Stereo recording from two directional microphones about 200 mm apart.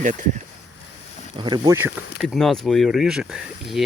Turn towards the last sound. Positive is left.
turn(degrees=0)  # may be behind; listen again after turning